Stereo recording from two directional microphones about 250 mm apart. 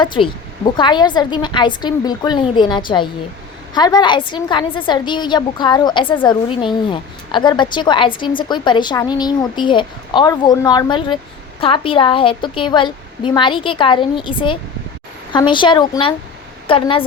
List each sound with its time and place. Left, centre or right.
0.0 s a woman's voice: centre